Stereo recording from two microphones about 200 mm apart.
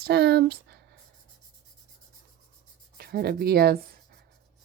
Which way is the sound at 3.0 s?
50° right (ahead or behind).